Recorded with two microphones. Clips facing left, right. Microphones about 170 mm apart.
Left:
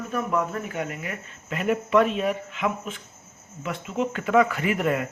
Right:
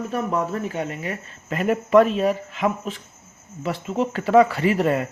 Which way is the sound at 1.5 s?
40° right (ahead or behind).